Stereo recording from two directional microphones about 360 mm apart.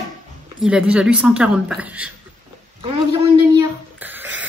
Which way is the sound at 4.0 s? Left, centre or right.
Centre.